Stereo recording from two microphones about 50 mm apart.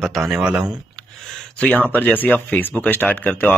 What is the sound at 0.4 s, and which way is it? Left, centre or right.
Speech, right.